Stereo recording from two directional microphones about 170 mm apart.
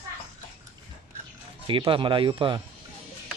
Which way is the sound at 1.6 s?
30° right (ahead or behind).